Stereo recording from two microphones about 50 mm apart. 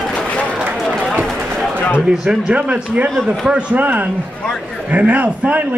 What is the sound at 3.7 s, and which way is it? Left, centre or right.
Speech, right.